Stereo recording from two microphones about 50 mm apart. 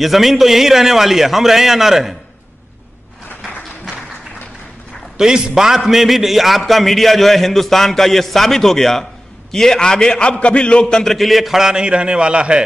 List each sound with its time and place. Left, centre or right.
0.0 s a man's voice: centre
5.1 s a man's voice: centre
11.1 s a man's voice: centre